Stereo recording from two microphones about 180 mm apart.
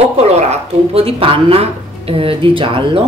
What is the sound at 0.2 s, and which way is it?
Speech, 35° right (ahead or behind).